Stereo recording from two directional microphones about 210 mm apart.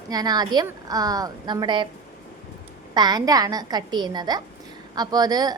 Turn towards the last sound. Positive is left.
turn(degrees=-20)  # may be behind; listen again after turning